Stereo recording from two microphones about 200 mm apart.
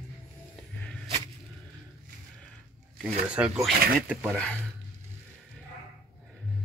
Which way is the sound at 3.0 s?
5° right (ahead or behind).